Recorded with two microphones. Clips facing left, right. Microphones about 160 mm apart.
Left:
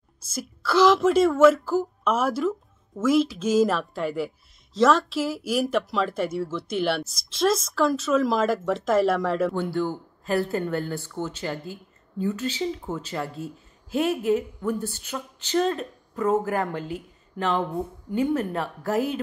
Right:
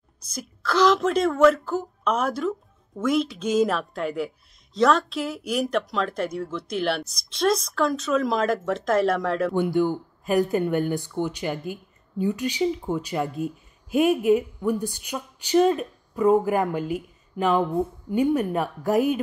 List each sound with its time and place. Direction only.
0.3 s speech: 5° left (ahead or behind)
9.5 s speech: 15° right (ahead or behind)